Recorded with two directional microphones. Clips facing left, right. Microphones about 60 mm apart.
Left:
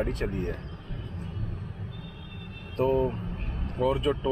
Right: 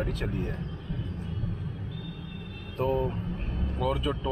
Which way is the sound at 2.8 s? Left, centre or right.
Left.